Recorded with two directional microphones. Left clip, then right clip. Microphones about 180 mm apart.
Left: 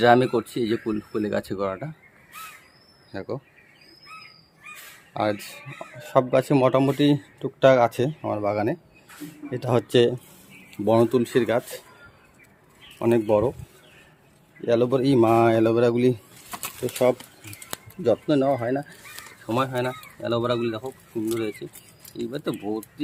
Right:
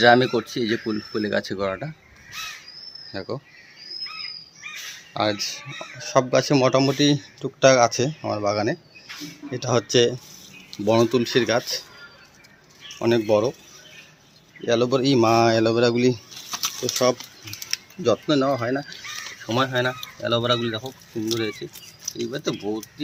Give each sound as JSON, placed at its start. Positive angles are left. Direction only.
{"t": 0.0, "sound": "speech", "side_deg": 0}
{"t": 3.1, "sound": "speech", "side_deg": 5}
{"t": 5.1, "sound": "speech", "side_deg": 5}
{"t": 13.0, "sound": "speech", "side_deg": 5}
{"t": 14.7, "sound": "speech", "side_deg": 10}